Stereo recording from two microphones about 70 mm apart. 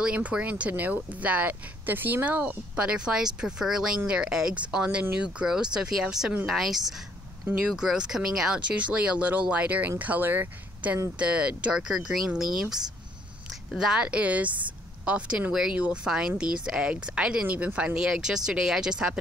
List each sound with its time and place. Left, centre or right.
0.0 s speech: centre
2.4 s speech: centre